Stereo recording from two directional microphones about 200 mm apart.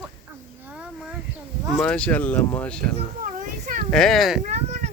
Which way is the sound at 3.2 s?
40° right (ahead or behind).